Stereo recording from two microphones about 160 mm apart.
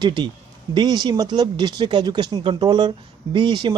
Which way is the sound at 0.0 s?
30° right (ahead or behind).